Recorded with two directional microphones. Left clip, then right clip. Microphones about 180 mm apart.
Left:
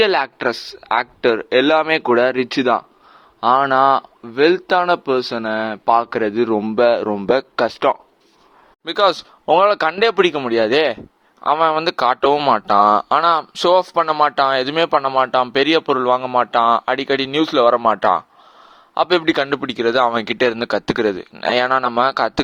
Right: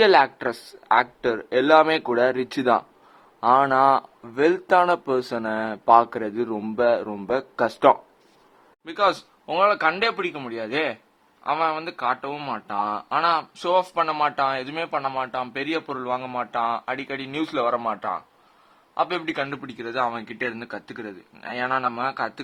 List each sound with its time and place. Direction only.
0.0 s speech: 30° left (ahead or behind)
8.8 s speech: 40° left (ahead or behind)